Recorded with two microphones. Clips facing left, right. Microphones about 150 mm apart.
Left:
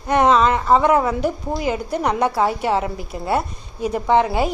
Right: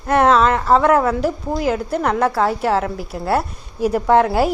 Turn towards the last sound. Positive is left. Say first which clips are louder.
# right 3 dB
turn(degrees=0)  # may be behind; listen again after turning